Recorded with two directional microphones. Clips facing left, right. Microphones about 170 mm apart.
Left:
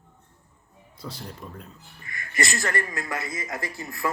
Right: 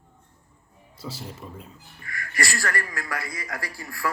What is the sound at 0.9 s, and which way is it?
Speech, 5° right (ahead or behind).